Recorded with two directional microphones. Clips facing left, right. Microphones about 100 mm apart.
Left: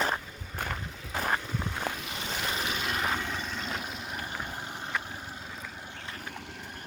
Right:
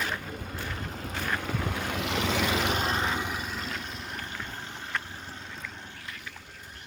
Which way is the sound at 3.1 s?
10° right (ahead or behind).